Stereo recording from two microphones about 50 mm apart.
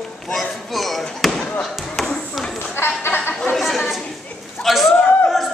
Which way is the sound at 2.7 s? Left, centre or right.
Left.